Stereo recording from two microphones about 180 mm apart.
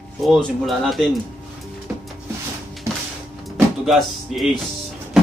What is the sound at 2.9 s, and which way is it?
Music, 15° right (ahead or behind).